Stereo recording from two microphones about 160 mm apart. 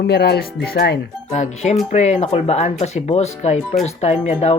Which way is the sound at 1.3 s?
50° left (ahead or behind).